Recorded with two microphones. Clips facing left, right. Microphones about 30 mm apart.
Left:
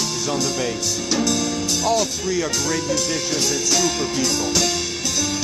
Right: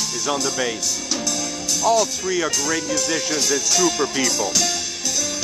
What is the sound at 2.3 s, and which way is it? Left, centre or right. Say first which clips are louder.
Speech: even; right.